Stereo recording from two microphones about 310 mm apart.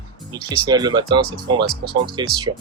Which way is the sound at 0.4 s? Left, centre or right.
Centre.